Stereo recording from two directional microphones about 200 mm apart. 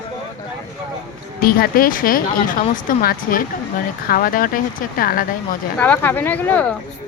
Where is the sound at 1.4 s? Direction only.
50° left (ahead or behind).